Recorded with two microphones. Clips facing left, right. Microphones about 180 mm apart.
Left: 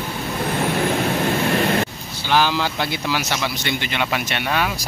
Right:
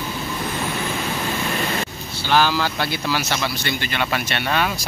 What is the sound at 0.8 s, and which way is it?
Vehicle, 60° left (ahead or behind).